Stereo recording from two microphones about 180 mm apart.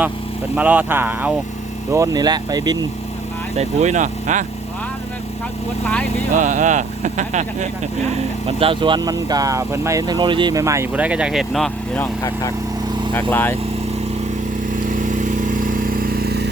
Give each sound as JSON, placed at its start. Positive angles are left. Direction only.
{"t": 0.5, "sound": "speech", "side_deg": -10}
{"t": 3.6, "sound": "speech", "side_deg": -40}
{"t": 6.3, "sound": "speech", "side_deg": -45}
{"t": 8.4, "sound": "speech", "side_deg": -30}
{"t": 13.1, "sound": "speech", "side_deg": 10}
{"t": 14.8, "sound": "vehicle", "side_deg": -45}